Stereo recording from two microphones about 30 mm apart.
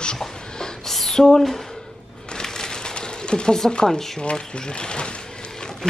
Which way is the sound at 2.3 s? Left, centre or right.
Left.